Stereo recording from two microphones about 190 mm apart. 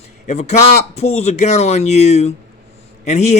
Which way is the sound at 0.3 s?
35° left (ahead or behind).